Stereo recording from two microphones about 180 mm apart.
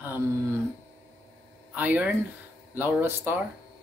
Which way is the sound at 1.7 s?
10° right (ahead or behind).